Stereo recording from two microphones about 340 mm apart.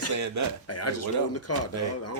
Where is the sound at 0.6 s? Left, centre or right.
Left.